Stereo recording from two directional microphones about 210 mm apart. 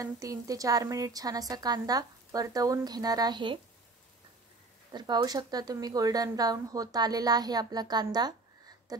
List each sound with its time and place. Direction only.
0.0 s a woman's voice: 15° right (ahead or behind)
4.9 s a woman's voice: 20° right (ahead or behind)